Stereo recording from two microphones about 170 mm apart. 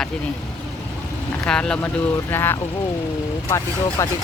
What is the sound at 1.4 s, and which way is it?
Speech, 5° left (ahead or behind).